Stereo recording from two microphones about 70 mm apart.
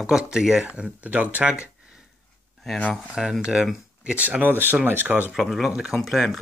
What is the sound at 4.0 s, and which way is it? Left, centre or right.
Speech, centre.